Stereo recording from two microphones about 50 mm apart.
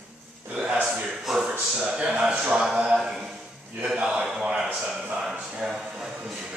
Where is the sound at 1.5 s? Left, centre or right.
Right.